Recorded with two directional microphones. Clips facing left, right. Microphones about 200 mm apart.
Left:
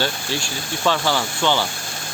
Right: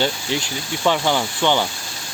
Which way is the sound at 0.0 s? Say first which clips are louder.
Right 2 dB; 20° right (ahead or behind).